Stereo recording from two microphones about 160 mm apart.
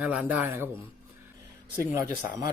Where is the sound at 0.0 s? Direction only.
10° right (ahead or behind).